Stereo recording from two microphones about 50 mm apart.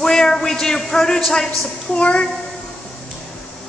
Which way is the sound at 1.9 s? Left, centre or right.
Left.